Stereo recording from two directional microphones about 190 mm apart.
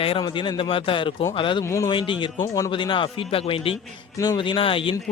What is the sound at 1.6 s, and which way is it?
Speech, 15° left (ahead or behind).